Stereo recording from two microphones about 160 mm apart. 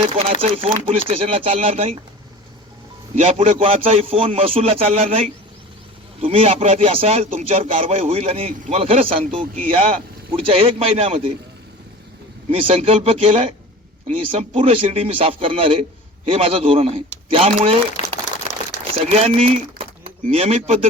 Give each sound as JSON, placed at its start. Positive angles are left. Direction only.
{"t": 0.1, "sound": "speech", "side_deg": -35}
{"t": 3.2, "sound": "speech", "side_deg": -35}
{"t": 6.2, "sound": "speech", "side_deg": -35}
{"t": 12.5, "sound": "speech", "side_deg": -35}
{"t": 18.0, "sound": "crumpling", "side_deg": 45}
{"t": 18.9, "sound": "speech", "side_deg": -40}